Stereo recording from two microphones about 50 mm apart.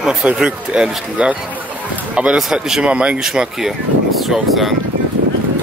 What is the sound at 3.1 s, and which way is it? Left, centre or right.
Speech, centre.